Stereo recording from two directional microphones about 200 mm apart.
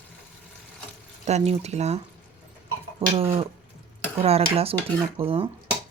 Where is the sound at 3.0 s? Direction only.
30° right (ahead or behind).